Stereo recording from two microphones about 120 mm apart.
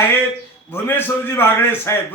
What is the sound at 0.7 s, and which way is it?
A man's voice, 15° left (ahead or behind).